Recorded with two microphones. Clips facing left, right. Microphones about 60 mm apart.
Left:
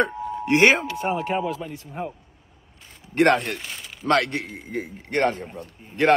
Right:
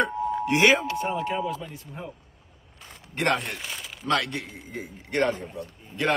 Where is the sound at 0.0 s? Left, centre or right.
Left.